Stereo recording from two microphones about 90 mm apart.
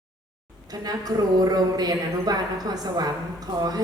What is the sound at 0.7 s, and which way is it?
A woman's voice, 45° right (ahead or behind).